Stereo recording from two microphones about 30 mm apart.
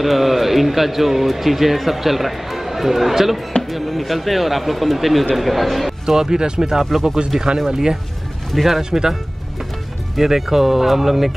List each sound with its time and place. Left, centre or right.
0.0 s a man's voice: centre
6.0 s speech: centre
6.8 s a man's voice: centre
7.3 s speech: right
10.1 s speech: centre